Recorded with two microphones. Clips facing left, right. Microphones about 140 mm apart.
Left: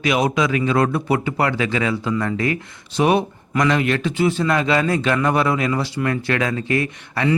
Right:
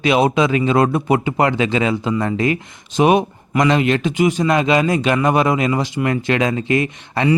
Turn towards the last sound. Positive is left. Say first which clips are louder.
# right 3 dB
turn(degrees=-20)  # may be behind; listen again after turning